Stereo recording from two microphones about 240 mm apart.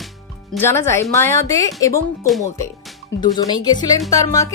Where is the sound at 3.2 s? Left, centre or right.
Centre.